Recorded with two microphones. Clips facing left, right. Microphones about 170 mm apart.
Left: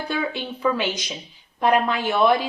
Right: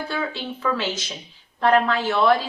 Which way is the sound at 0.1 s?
15° left (ahead or behind).